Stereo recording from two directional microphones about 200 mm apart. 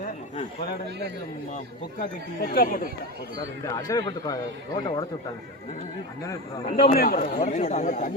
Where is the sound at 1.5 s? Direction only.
45° left (ahead or behind).